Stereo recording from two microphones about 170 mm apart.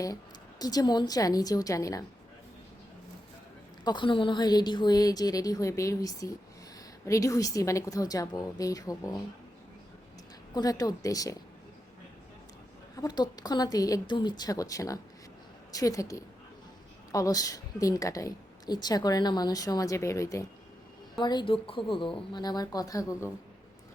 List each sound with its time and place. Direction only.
0.6 s a woman's voice: 20° left (ahead or behind)
3.8 s a woman's voice: 30° left (ahead or behind)
10.5 s a woman's voice: 20° left (ahead or behind)
13.0 s a woman's voice: 25° left (ahead or behind)